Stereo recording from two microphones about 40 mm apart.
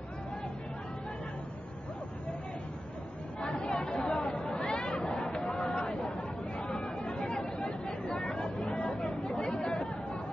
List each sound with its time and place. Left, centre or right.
3.5 s chatter: centre
8.3 s a sound: centre
8.7 s chatter: left
9.4 s chatter: left